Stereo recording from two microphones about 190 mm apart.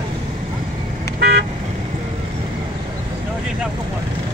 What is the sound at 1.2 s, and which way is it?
Car, 60° right (ahead or behind).